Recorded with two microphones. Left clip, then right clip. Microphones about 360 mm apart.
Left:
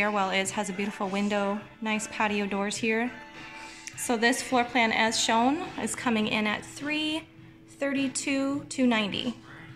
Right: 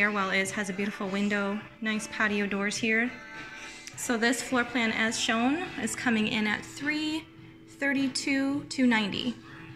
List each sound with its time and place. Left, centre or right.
0.0 s a woman's voice: centre